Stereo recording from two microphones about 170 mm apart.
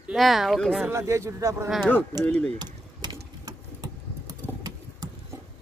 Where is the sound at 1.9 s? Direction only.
10° left (ahead or behind).